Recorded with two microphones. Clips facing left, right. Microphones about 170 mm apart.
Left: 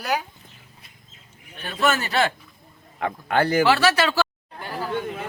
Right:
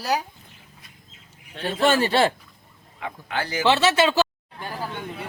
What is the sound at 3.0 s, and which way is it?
Speech, 60° left (ahead or behind).